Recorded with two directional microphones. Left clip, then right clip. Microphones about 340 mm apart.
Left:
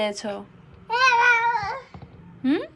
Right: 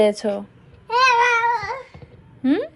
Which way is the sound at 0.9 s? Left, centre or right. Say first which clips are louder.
Right 2 dB; left.